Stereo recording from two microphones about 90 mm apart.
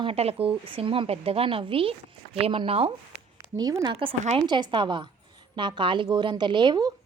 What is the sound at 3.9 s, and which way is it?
Speech, 80° right.